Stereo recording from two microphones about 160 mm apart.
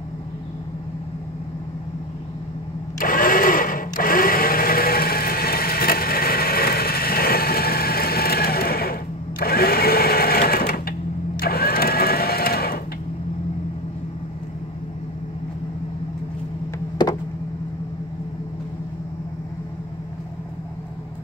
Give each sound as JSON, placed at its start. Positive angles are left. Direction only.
{"t": 3.0, "sound": "blender", "side_deg": 60}
{"t": 9.4, "sound": "sewing machine", "side_deg": 70}